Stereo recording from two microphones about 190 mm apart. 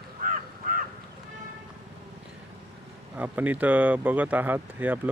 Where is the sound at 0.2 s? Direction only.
45° right (ahead or behind).